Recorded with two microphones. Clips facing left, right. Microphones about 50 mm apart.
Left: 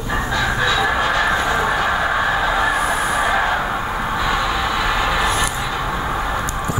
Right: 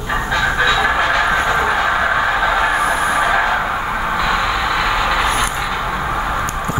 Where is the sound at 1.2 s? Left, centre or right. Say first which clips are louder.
Right 2 dB; right.